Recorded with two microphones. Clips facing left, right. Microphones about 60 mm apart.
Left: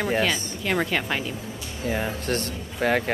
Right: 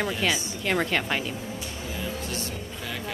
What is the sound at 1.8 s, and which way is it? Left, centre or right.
Speech, left.